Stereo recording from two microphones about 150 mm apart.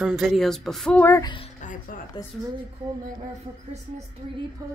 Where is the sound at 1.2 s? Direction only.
30° left (ahead or behind).